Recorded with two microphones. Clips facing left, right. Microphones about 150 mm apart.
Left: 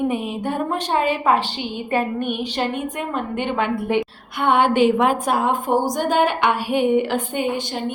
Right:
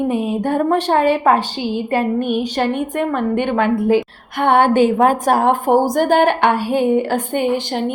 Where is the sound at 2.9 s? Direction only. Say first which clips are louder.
Right 7 dB; 60° right (ahead or behind); by 5.4 s 45° right (ahead or behind).